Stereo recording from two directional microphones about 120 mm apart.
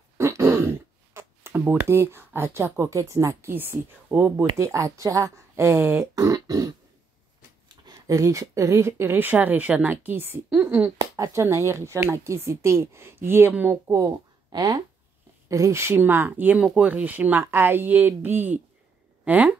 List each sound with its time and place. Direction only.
0.2 s throat clearing: 25° right (ahead or behind)
1.9 s speech: 20° right (ahead or behind)
11.0 s speech: 30° right (ahead or behind); by 13.7 s 15° right (ahead or behind)
13.8 s speech: 25° right (ahead or behind)